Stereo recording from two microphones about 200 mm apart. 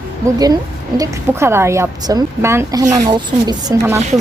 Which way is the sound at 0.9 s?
15° right (ahead or behind).